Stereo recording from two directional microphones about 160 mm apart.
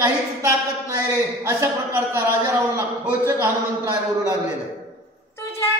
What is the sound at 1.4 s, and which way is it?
A man's voice, 15° right (ahead or behind).